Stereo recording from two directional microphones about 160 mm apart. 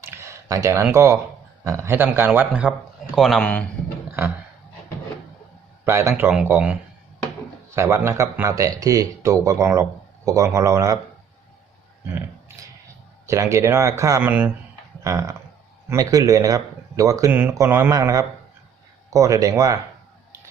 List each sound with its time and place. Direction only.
0.0 s a sound: 15° right (ahead or behind)
1.6 s a man's voice: 20° right (ahead or behind); by 3.7 s 5° left (ahead or behind)
5.8 s speech: 15° right (ahead or behind)
7.8 s speech: 15° right (ahead or behind)
13.2 s speech: 20° right (ahead or behind)